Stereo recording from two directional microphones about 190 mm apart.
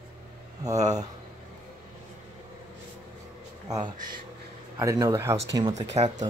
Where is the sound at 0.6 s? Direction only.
20° right (ahead or behind).